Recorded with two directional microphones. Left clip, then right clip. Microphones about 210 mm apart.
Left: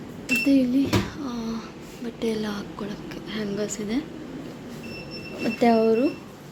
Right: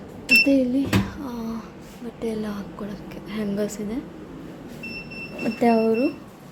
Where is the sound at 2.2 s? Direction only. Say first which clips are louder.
Left 1 dB; 5° right (ahead or behind).